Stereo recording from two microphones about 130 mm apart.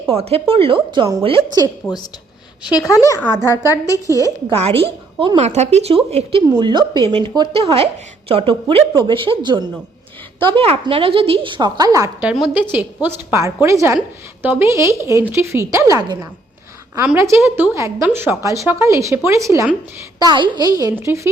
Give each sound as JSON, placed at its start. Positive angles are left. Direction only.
{"t": 0.1, "sound": "a woman's voice", "side_deg": -50}
{"t": 1.8, "sound": "a woman's voice", "side_deg": 25}
{"t": 5.4, "sound": "a woman's voice", "side_deg": -60}
{"t": 6.5, "sound": "a woman's voice", "side_deg": -35}
{"t": 12.2, "sound": "a woman's voice", "side_deg": -10}
{"t": 17.2, "sound": "a woman's voice", "side_deg": -20}
{"t": 20.1, "sound": "a woman's voice", "side_deg": -35}